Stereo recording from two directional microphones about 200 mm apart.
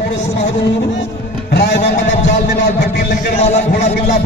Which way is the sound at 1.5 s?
55° left (ahead or behind).